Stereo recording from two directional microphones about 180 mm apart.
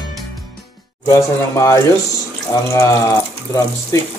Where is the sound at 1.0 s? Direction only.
15° left (ahead or behind).